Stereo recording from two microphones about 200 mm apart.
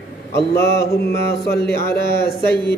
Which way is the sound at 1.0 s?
55° left (ahead or behind).